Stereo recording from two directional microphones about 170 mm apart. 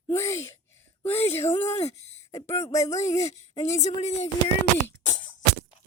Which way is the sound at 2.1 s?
15° left (ahead or behind).